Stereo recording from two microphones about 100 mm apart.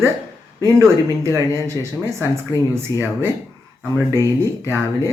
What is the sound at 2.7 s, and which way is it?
Speech, 25° right (ahead or behind).